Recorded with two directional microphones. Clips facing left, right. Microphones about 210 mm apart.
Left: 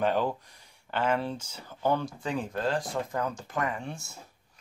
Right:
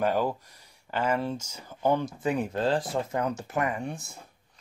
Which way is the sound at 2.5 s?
30° right (ahead or behind).